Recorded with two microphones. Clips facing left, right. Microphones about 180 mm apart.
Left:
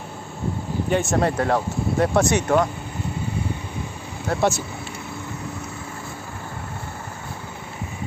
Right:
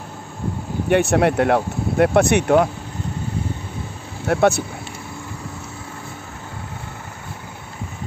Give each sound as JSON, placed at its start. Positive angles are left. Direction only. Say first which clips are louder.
{"t": 0.8, "sound": "speech", "louder": "right 5 dB", "side_deg": -70}
{"t": 4.3, "sound": "speech", "louder": "right 5 dB", "side_deg": -60}